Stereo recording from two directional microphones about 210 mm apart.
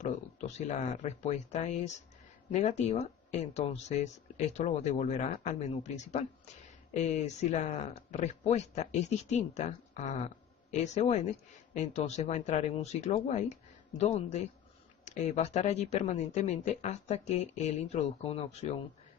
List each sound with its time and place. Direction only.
0.0 s speech: 35° left (ahead or behind)